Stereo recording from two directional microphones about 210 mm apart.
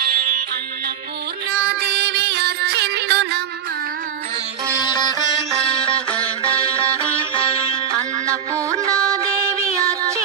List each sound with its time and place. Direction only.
1.5 s music: 50° right (ahead or behind)
4.7 s sitar: 20° left (ahead or behind)
8.3 s music: 15° right (ahead or behind)